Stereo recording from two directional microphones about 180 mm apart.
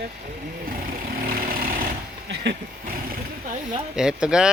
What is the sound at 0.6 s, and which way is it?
Vehicle, 50° right (ahead or behind).